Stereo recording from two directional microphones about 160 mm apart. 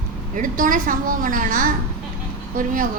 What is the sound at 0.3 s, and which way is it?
A woman's voice, 55° right (ahead or behind).